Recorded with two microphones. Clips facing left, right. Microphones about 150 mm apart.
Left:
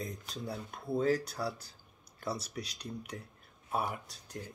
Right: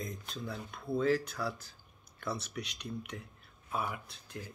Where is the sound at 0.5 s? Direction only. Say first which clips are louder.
Left 1 dB; 40° left (ahead or behind).